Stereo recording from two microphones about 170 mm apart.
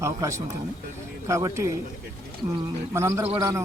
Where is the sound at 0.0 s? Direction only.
15° right (ahead or behind).